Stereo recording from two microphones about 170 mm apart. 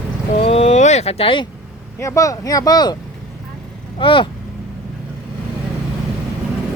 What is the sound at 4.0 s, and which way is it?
Speech, 30° left (ahead or behind).